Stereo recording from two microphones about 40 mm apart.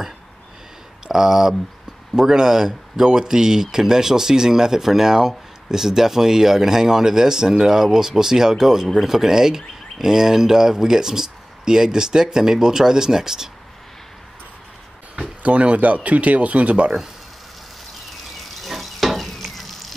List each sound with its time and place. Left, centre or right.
1.0 s speech: centre
15.1 s speech: right
18.6 s frying: centre